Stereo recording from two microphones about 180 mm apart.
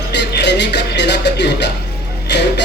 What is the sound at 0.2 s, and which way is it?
Music, 70° left (ahead or behind).